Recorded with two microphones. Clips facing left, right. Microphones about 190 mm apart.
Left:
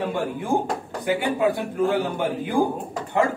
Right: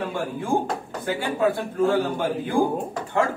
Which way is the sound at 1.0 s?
15° left (ahead or behind).